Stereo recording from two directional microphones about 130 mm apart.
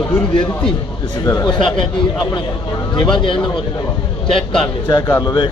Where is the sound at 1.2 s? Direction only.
25° left (ahead or behind).